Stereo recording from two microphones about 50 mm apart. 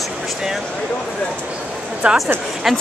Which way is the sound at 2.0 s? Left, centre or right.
Right.